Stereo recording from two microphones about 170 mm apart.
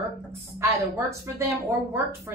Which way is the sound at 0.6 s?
15° right (ahead or behind).